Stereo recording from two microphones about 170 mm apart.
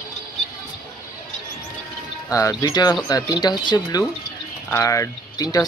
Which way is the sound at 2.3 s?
20° left (ahead or behind).